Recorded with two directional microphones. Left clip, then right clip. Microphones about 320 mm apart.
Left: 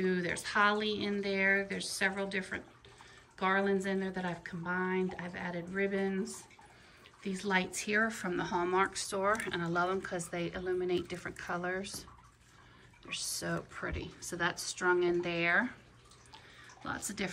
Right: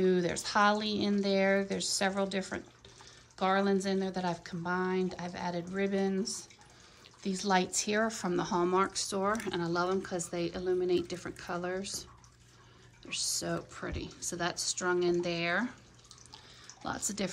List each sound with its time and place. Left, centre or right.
0.0 s speech: centre
13.1 s speech: centre
16.8 s speech: centre